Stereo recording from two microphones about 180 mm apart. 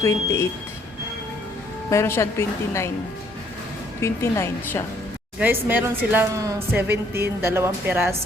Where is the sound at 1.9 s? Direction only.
15° left (ahead or behind).